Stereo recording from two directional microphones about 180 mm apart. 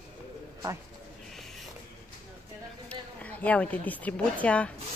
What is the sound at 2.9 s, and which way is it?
A woman's voice, 10° left (ahead or behind).